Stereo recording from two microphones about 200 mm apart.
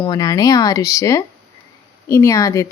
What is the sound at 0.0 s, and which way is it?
Speech, 20° left (ahead or behind).